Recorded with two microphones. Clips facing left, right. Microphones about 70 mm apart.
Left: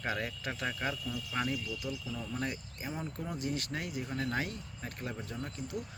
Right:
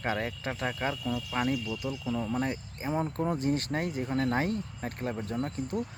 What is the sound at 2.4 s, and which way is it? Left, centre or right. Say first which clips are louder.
Speech: right 6 dB; right.